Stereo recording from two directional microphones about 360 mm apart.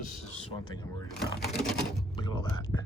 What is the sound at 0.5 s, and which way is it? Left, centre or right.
Speech, centre.